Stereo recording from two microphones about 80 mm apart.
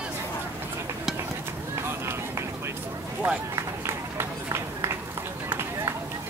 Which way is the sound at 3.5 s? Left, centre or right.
Right.